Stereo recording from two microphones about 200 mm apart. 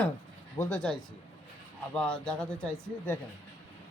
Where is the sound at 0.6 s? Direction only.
5° left (ahead or behind).